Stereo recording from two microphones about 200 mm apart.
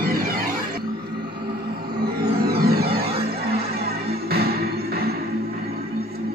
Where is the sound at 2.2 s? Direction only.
50° right (ahead or behind).